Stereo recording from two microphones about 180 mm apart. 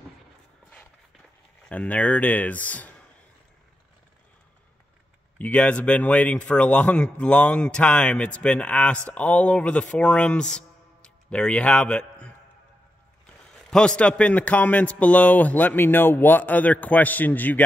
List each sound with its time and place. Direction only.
1.7 s speech: 10° left (ahead or behind)
5.4 s speech: 5° left (ahead or behind)
13.7 s speech: 5° left (ahead or behind)